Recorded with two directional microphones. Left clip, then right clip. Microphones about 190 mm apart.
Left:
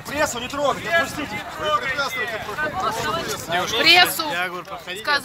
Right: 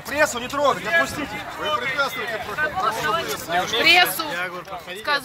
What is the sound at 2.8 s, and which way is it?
Speech, 50° right (ahead or behind).